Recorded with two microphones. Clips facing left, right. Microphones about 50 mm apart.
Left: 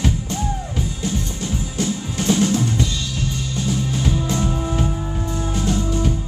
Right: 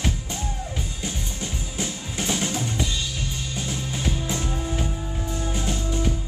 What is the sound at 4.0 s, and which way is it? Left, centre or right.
Music, centre.